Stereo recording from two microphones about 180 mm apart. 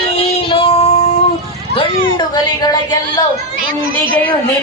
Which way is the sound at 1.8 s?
25° left (ahead or behind).